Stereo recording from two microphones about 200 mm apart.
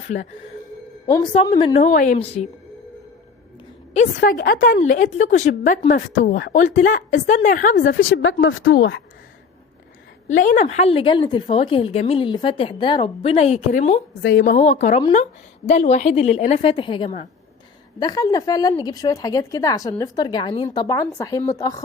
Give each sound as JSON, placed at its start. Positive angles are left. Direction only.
{"t": 0.1, "sound": "a woman's voice", "side_deg": 35}
{"t": 1.0, "sound": "a woman's voice", "side_deg": 20}
{"t": 1.8, "sound": "a woman's voice", "side_deg": 40}
{"t": 4.2, "sound": "a woman's voice", "side_deg": 45}
{"t": 6.5, "sound": "a woman's voice", "side_deg": 40}
{"t": 7.8, "sound": "speech", "side_deg": 65}
{"t": 10.2, "sound": "a woman's voice", "side_deg": 40}
{"t": 14.2, "sound": "a woman's voice", "side_deg": 65}
{"t": 14.6, "sound": "a woman's voice", "side_deg": 35}